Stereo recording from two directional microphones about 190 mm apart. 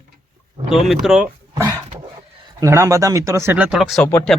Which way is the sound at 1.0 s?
5° right (ahead or behind).